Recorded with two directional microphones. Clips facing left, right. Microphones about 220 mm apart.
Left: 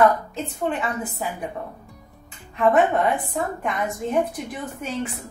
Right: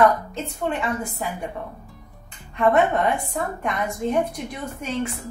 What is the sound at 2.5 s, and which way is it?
A woman's voice, centre (ahead or behind).